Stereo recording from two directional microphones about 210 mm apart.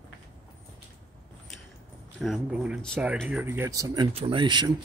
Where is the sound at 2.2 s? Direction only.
Centre (ahead or behind); by 4.7 s 20° right (ahead or behind).